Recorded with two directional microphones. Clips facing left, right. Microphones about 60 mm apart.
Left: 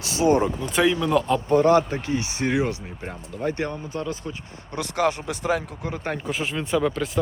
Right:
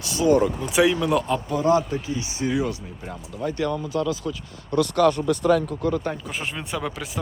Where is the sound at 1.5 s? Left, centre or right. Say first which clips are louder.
Left 4 dB; left.